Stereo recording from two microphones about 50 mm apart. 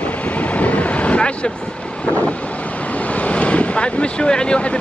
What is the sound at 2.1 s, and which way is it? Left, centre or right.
Speech, left.